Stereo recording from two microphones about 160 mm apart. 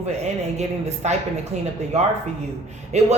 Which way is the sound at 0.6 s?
45° right (ahead or behind).